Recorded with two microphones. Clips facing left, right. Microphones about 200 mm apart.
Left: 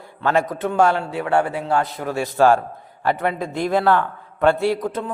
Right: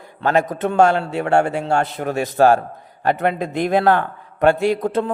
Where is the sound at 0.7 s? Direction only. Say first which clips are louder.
Right 3 dB; 25° right (ahead or behind).